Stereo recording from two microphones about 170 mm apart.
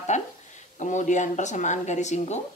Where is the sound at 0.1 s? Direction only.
45° left (ahead or behind).